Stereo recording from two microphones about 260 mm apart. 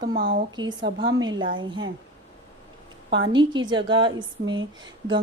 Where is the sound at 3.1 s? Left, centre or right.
Centre.